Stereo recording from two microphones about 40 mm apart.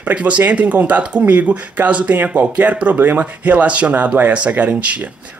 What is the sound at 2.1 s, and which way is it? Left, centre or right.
Speech, right.